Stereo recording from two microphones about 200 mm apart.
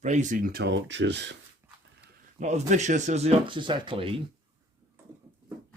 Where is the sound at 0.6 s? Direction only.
60° right (ahead or behind).